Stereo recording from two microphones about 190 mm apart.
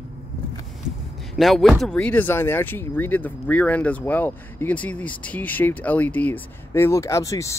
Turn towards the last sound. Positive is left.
turn(degrees=15)  # may be behind; listen again after turning